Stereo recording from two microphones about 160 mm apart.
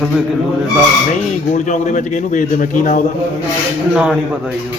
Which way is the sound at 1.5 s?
50° left (ahead or behind).